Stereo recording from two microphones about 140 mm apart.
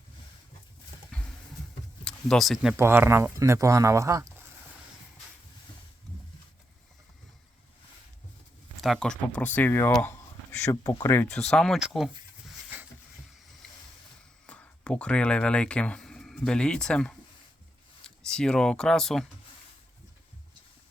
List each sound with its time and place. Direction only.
1.1 s horse: 10° left (ahead or behind)
2.0 s speech: 5° left (ahead or behind)
2.7 s speech: 15° right (ahead or behind)
8.8 s speech: centre (ahead or behind)
10.7 s speech: 25° left (ahead or behind)
11.3 s speech: 5° left (ahead or behind)
14.4 s speech: 10° left (ahead or behind)